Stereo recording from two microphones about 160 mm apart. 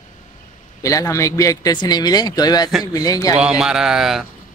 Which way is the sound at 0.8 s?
20° left (ahead or behind).